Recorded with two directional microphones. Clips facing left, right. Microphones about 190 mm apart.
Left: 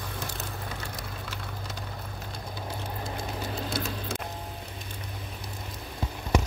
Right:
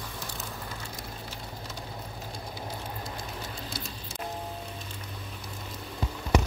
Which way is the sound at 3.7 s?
60° left (ahead or behind).